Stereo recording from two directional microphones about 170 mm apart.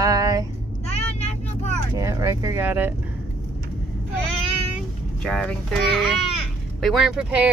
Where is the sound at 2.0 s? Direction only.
20° right (ahead or behind).